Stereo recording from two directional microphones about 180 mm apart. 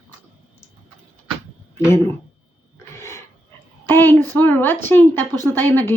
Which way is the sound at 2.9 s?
15° left (ahead or behind).